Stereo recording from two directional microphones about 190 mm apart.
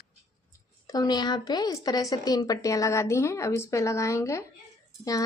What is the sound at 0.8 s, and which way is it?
Speech, 20° left (ahead or behind).